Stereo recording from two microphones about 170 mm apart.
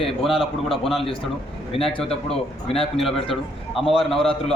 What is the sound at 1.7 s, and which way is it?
A man's voice, 35° left (ahead or behind).